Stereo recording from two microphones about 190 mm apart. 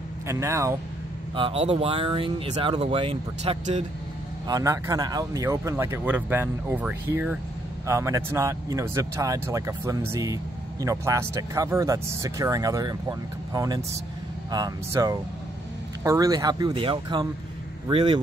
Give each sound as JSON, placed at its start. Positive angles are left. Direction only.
{"t": 0.3, "sound": "speech", "side_deg": -15}
{"t": 1.3, "sound": "speech", "side_deg": -30}
{"t": 4.5, "sound": "speech", "side_deg": -20}